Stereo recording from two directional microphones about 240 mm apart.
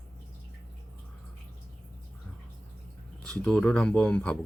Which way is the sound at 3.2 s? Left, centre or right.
Centre.